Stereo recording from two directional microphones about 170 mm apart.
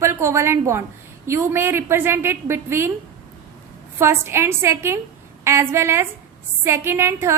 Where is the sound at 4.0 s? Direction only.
15° right (ahead or behind).